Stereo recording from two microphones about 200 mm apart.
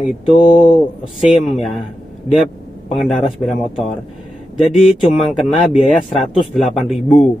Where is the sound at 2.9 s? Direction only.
Centre (ahead or behind).